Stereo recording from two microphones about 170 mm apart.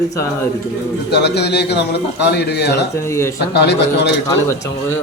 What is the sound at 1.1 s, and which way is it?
Speech, 75° left (ahead or behind).